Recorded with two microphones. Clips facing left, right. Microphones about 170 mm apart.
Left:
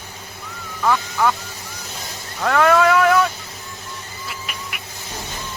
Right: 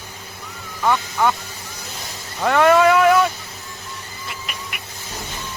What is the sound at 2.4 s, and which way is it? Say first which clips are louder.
Vehicle: right 2 dB; 5° right (ahead or behind).